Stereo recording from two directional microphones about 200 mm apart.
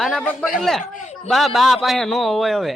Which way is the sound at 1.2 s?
Centre (ahead or behind).